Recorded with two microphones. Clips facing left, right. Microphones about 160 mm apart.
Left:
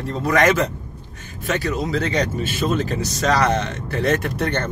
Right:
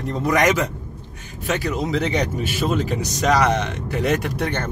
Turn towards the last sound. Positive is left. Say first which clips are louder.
# left 1 dB
turn(degrees=-10)  # may be behind; listen again after turning